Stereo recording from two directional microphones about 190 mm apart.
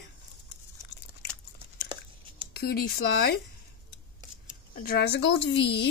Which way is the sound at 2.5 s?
55° left (ahead or behind).